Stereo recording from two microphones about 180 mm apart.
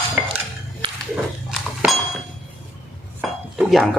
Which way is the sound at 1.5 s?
5° right (ahead or behind).